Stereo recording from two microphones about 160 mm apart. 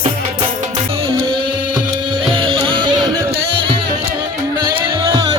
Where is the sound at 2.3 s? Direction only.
30° right (ahead or behind).